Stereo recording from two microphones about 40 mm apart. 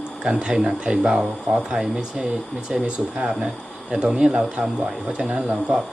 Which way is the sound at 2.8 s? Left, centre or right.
Right.